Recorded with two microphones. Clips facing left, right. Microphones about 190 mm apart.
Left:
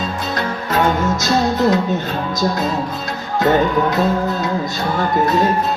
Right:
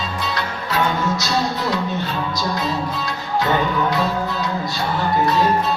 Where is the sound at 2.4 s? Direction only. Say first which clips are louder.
Left 6 dB; 45° left (ahead or behind).